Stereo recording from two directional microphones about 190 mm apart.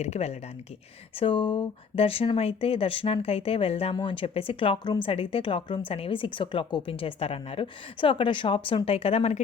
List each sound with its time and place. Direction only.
0.0 s speech: 35° left (ahead or behind)